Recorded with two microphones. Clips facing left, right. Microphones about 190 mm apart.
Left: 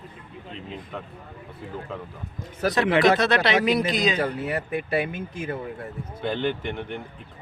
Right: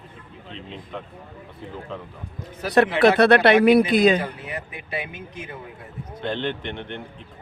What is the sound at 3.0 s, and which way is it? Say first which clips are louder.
Speech: right 5 dB; 60° right (ahead or behind).